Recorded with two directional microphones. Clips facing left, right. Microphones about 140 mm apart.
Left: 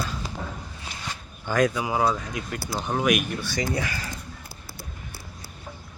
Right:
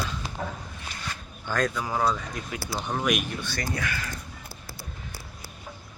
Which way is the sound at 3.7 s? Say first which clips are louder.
Left 2 dB; 30° left (ahead or behind).